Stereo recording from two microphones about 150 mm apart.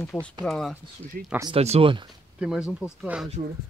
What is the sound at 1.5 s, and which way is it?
Speech, 40° right (ahead or behind).